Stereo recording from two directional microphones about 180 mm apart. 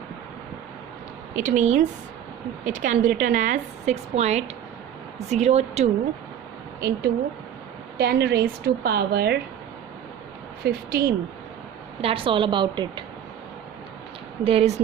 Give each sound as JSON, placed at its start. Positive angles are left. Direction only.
{"t": 1.4, "sound": "a woman's voice", "side_deg": -45}
{"t": 6.7, "sound": "a woman's voice", "side_deg": -60}
{"t": 10.7, "sound": "a woman's voice", "side_deg": -55}
{"t": 12.0, "sound": "a woman's voice", "side_deg": -30}
{"t": 14.4, "sound": "a woman's voice", "side_deg": -35}